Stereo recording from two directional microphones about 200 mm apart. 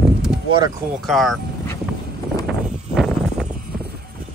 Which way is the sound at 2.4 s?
Centre (ahead or behind).